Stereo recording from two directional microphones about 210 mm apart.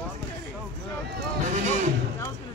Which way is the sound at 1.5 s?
35° right (ahead or behind).